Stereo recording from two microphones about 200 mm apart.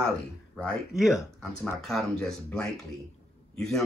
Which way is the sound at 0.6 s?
Centre (ahead or behind).